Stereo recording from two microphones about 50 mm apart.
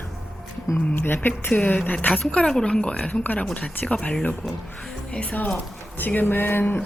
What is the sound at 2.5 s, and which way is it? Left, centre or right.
Speech, centre.